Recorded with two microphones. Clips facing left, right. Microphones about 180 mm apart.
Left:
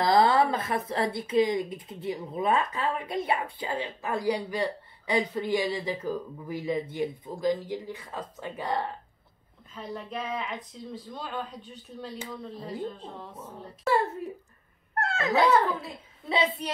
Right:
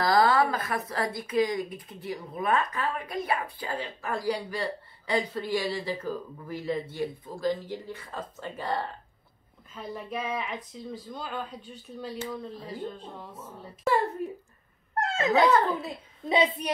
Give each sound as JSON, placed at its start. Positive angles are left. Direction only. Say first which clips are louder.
{"t": 0.0, "sound": "a woman's voice", "louder": "left 1 dB", "side_deg": 25}
{"t": 9.8, "sound": "speech", "louder": "right 1 dB", "side_deg": -5}
{"t": 15.0, "sound": "wail", "louder": "right 2 dB", "side_deg": -20}
{"t": 16.3, "sound": "a woman's voice", "louder": "right 3 dB", "side_deg": -15}